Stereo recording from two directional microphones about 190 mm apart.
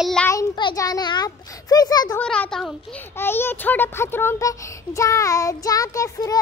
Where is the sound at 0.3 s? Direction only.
20° left (ahead or behind).